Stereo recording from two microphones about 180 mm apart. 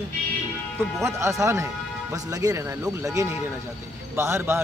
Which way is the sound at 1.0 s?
15° right (ahead or behind).